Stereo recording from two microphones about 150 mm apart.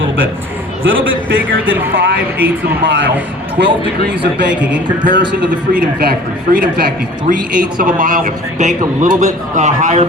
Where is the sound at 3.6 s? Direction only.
90° right.